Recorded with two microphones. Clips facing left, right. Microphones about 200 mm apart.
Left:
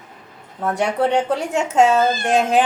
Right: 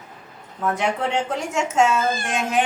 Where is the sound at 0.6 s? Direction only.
35° left (ahead or behind).